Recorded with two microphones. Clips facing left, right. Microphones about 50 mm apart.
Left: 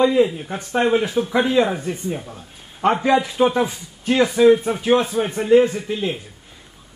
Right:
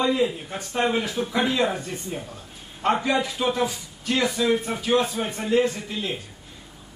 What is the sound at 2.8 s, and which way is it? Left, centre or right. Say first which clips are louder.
A man's voice: left 5 dB; left.